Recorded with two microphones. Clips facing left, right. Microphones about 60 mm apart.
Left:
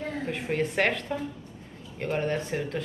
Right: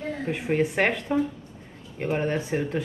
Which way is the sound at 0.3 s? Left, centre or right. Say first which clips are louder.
Right 5 dB; centre.